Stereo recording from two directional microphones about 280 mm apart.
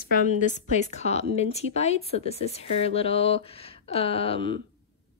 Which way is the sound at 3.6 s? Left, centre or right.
Centre.